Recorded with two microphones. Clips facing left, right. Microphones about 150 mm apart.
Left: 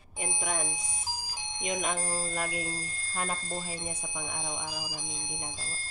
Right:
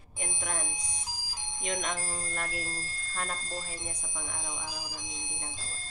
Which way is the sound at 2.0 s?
30° left (ahead or behind).